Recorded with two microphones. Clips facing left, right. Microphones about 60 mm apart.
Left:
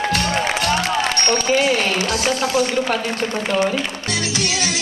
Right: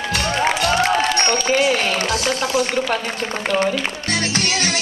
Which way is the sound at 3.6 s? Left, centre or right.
Right.